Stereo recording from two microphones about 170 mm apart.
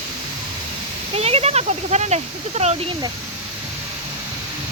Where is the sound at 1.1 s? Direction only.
35° right (ahead or behind).